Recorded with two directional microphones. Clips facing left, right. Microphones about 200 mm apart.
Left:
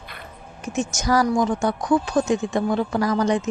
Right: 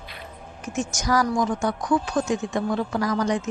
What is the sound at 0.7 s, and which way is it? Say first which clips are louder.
Speech: left 3 dB; 25° left (ahead or behind).